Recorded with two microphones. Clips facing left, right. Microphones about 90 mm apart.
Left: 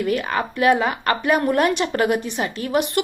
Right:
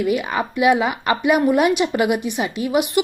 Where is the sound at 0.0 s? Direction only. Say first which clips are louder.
Right 1 dB; 10° right (ahead or behind).